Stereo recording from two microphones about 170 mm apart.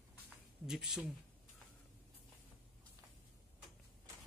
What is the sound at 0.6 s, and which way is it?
Speech, centre (ahead or behind).